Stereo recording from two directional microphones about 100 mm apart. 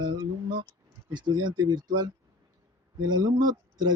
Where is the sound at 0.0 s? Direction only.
45° right (ahead or behind).